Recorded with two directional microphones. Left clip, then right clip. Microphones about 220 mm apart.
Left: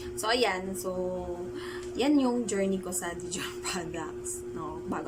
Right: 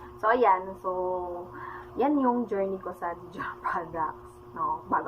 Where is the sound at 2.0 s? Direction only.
25° left (ahead or behind).